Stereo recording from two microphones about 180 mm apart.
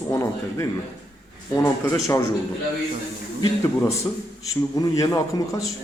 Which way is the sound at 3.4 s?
15° left (ahead or behind).